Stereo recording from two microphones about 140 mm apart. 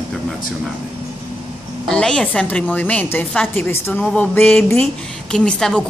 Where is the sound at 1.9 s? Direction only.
5° left (ahead or behind).